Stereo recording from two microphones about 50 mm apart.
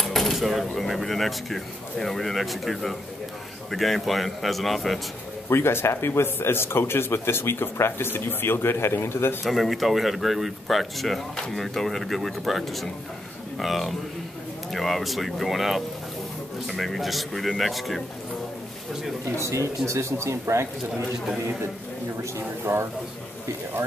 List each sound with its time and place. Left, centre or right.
0.0 s speech: centre
5.5 s speech: left
9.4 s speech: centre
19.3 s speech: right
22.2 s speech: right